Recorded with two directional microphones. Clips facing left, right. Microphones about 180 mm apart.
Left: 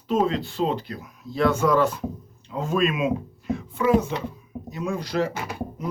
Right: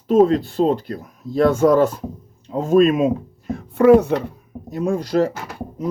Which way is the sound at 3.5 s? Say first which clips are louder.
Right 9 dB; 65° right (ahead or behind).